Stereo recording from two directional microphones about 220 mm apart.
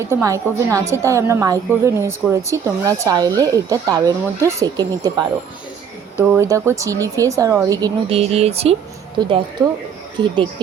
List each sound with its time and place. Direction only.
0.0 s a woman's voice: 15° right (ahead or behind)
8.2 s speech: 30° right (ahead or behind)